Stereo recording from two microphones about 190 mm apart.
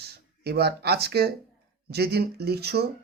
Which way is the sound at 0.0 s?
55° right (ahead or behind).